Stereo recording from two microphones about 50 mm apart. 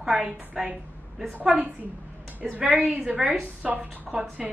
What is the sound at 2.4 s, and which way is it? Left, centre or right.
Speech, right.